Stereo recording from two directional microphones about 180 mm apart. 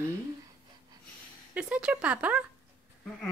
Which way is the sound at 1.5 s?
5° right (ahead or behind).